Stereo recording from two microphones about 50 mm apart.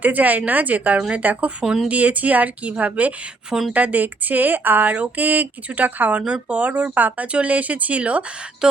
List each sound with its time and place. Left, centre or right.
0.0 s speech: right
1.6 s speech: centre
1.9 s speech: right